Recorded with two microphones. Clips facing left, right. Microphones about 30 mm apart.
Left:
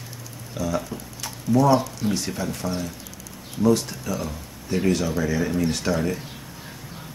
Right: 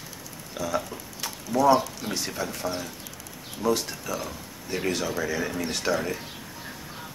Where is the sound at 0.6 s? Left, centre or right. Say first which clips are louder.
Left 2 dB; centre.